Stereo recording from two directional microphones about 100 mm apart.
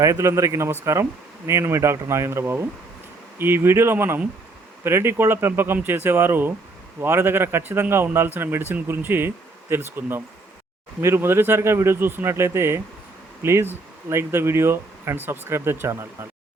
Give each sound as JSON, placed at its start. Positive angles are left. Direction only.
{"t": 0.0, "sound": "a man's voice", "side_deg": -30}